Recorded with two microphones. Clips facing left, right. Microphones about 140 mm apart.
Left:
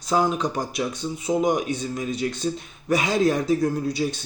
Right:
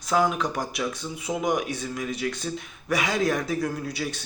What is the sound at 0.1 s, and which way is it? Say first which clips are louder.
Speech: left 1 dB; 30° left (ahead or behind).